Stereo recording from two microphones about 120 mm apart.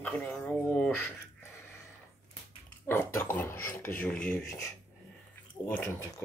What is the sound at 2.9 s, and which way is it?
Speech, 20° left (ahead or behind).